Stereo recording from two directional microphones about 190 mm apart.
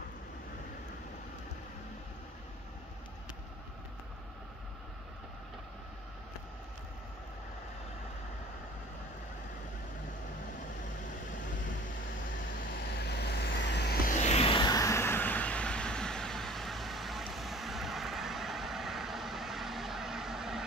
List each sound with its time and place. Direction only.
13.0 s vehicle: 60° left (ahead or behind)
14.1 s vehicle: 35° left (ahead or behind); by 20.6 s centre (ahead or behind)